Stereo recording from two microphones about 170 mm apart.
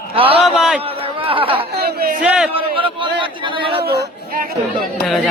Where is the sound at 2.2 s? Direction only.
5° right (ahead or behind).